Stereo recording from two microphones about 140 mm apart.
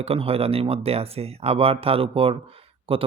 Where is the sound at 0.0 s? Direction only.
45° right (ahead or behind).